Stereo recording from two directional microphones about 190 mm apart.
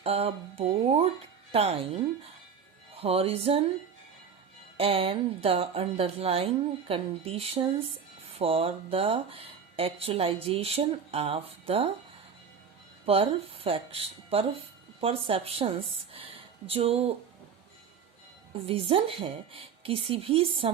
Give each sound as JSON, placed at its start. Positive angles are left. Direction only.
{"t": 0.0, "sound": "speech", "side_deg": -30}
{"t": 2.9, "sound": "music", "side_deg": -30}
{"t": 4.8, "sound": "speech", "side_deg": -30}
{"t": 13.1, "sound": "speech", "side_deg": -30}
{"t": 18.5, "sound": "a woman's voice", "side_deg": -30}